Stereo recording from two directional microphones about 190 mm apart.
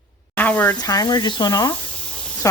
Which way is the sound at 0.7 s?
20° left (ahead or behind).